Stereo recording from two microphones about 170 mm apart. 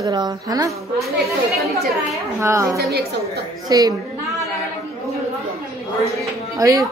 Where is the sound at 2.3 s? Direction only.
15° right (ahead or behind).